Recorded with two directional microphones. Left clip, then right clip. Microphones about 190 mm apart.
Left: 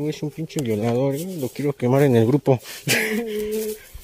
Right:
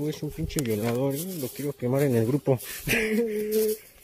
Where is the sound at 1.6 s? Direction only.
55° left (ahead or behind); by 3.0 s 30° left (ahead or behind).